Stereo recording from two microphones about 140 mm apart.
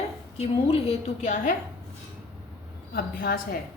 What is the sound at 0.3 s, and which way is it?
Speech, 45° left (ahead or behind).